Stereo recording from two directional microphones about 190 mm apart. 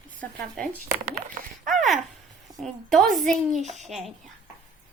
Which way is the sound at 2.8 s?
Centre (ahead or behind).